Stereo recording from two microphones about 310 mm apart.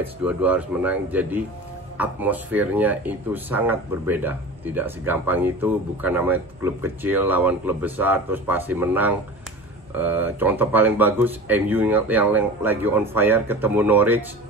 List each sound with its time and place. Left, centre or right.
0.0 s speech: centre